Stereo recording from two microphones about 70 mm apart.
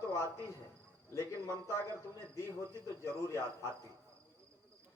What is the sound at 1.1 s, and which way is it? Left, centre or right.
Speech, left.